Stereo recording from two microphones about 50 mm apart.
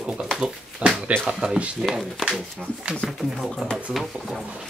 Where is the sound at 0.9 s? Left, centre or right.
Right.